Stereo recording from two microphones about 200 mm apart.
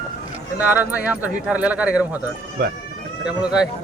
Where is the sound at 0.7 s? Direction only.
10° right (ahead or behind).